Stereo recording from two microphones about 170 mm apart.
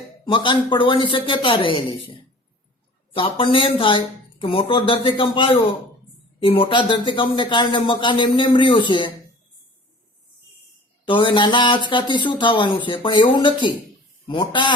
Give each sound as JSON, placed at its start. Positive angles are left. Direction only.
{"t": 0.3, "sound": "a man's voice", "side_deg": 30}
{"t": 3.2, "sound": "a man's voice", "side_deg": 30}
{"t": 11.0, "sound": "a man's voice", "side_deg": 30}